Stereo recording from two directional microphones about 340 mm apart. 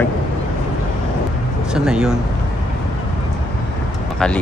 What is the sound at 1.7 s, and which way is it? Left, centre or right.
Speech, centre.